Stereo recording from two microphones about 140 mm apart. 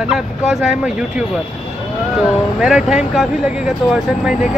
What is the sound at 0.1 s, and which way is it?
Speech, 5° right (ahead or behind).